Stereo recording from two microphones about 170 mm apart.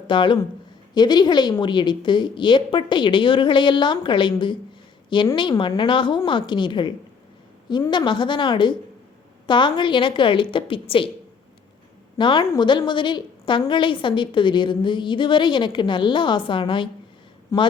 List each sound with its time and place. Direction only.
0.1 s a woman's voice: 30° left (ahead or behind)
12.1 s a woman's voice: 30° left (ahead or behind)
17.5 s a woman's voice: 20° left (ahead or behind)